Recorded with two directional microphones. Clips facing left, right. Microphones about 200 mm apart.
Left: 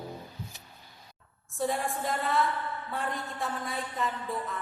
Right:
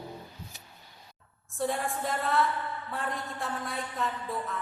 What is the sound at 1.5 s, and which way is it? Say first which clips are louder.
A woman's voice: even; centre (ahead or behind).